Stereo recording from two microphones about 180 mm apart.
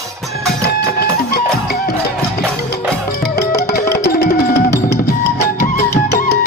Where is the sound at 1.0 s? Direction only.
60° left (ahead or behind).